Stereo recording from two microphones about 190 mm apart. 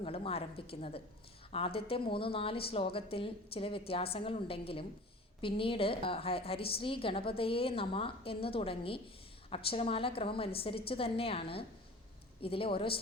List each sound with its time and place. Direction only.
0.0 s a woman's voice: 30° left (ahead or behind)